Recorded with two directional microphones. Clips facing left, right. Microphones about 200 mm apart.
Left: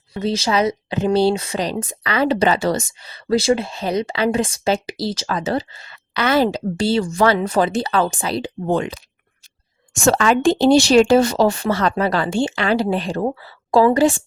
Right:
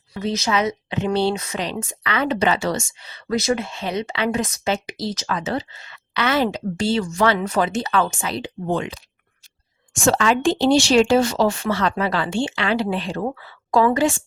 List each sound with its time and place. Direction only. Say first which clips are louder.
0.1 s a woman's voice: left 3 dB; 30° left (ahead or behind)
10.0 s a woman's voice: left 3 dB; 50° left (ahead or behind)
13.2 s a woman's voice: left 4 dB; 30° left (ahead or behind)